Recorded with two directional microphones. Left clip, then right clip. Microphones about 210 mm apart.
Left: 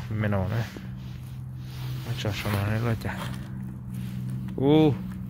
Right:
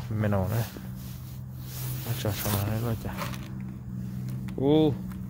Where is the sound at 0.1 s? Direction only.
15° right (ahead or behind).